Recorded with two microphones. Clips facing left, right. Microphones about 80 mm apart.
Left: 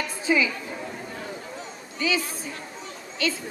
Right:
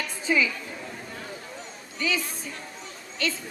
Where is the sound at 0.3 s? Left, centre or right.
Centre.